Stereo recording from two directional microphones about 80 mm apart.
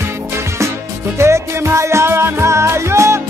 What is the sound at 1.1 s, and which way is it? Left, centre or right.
Music, right.